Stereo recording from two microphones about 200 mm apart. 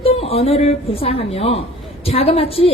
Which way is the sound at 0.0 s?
30° left (ahead or behind).